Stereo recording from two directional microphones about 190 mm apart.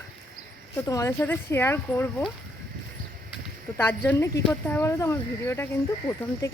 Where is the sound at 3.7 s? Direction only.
10° left (ahead or behind).